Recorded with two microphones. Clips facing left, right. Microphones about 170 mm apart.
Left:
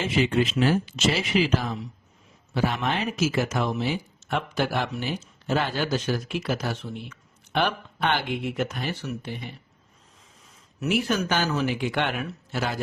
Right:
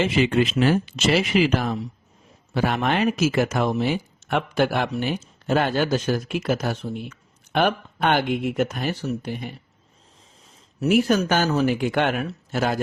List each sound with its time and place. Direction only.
0.0 s speech: 65° right (ahead or behind); by 9.5 s 50° right (ahead or behind)
10.8 s speech: 45° right (ahead or behind)